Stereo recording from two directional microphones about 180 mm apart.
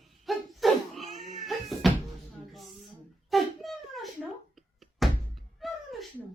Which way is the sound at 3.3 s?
Centre (ahead or behind).